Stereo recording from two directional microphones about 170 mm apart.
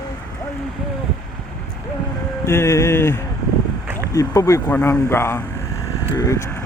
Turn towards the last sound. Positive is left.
turn(degrees=20)  # may be behind; listen again after turning